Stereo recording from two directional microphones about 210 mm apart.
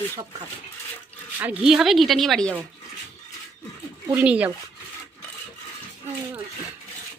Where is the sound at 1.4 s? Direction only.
5° right (ahead or behind).